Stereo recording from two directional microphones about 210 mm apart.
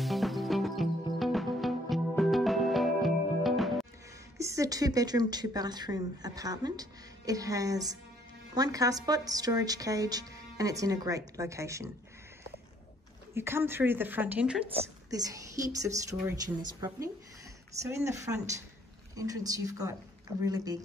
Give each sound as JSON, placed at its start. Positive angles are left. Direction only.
{"t": 0.0, "sound": "music", "side_deg": 0}
{"t": 4.4, "sound": "a woman's voice", "side_deg": -15}
{"t": 13.3, "sound": "a woman's voice", "side_deg": -10}
{"t": 14.7, "sound": "a woman's voice", "side_deg": -15}